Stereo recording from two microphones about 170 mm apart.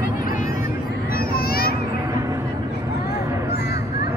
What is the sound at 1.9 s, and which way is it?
Music, 20° right (ahead or behind).